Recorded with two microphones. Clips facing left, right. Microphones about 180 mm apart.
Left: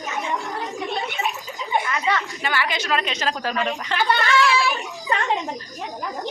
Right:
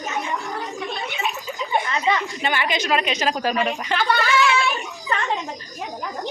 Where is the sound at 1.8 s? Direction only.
25° right (ahead or behind).